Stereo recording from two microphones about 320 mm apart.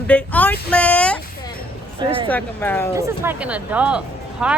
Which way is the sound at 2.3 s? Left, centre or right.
Centre.